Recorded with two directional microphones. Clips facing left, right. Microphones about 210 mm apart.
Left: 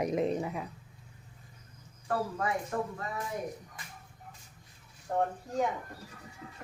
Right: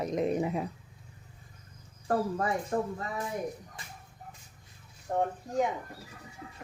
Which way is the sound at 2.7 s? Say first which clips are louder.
Right 5 dB; 20° right (ahead or behind).